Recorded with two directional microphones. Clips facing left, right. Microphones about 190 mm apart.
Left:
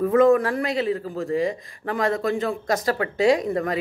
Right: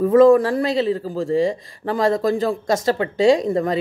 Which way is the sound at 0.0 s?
30° right (ahead or behind).